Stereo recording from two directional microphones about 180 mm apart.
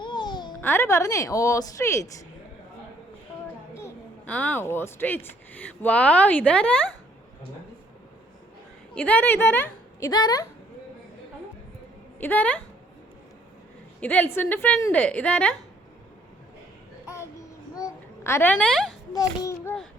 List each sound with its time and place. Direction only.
0.0 s a sound: 25° left (ahead or behind)
0.6 s speech: 10° left (ahead or behind)
3.8 s a child's voice: 10° left (ahead or behind)
9.0 s speech: 10° left (ahead or behind)
12.2 s speech: 10° left (ahead or behind)
14.0 s speech: 10° left (ahead or behind)
17.7 s a sound: 15° left (ahead or behind)